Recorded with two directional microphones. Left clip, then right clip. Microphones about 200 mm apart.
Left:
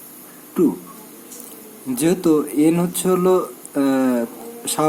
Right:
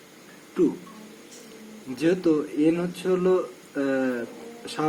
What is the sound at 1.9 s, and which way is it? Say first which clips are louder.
Speech: left 5 dB; 55° left (ahead or behind).